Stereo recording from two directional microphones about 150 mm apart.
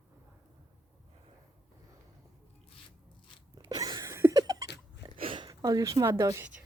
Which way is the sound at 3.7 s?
25° right (ahead or behind).